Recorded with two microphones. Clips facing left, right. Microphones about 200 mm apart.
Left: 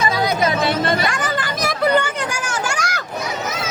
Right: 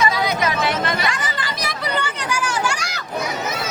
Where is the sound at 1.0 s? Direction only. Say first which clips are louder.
Left 3 dB; 50° left (ahead or behind).